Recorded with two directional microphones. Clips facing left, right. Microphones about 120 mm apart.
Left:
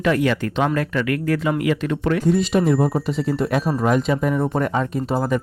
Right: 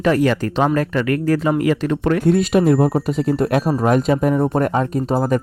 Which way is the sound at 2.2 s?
60° right (ahead or behind).